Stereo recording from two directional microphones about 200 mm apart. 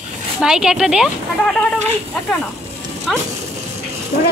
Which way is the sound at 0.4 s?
5° right (ahead or behind).